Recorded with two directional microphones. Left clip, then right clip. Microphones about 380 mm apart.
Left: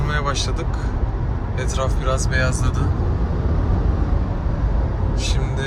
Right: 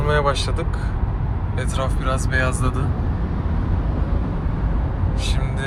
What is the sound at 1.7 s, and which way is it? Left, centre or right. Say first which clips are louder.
Speech: left 1 dB; centre.